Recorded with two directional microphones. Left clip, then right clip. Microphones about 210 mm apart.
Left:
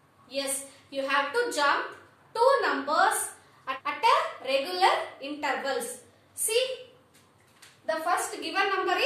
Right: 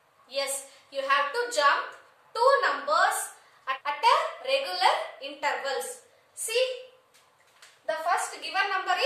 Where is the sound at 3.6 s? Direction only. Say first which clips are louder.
Right 1 dB; 15° right (ahead or behind).